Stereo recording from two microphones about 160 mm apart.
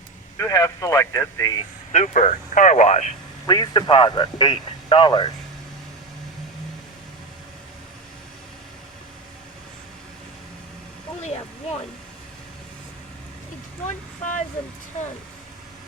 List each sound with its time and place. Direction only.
0.3 s speech: 20° left (ahead or behind)
1.9 s speech: 50° left (ahead or behind)
3.4 s a man's voice: 25° left (ahead or behind)
11.2 s a sound: 45° left (ahead or behind)
13.8 s speech: 50° left (ahead or behind)